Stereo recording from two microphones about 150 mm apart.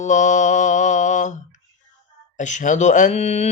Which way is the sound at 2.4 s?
55° left (ahead or behind).